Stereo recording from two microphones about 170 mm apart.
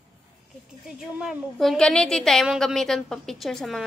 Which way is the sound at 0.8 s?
5° right (ahead or behind).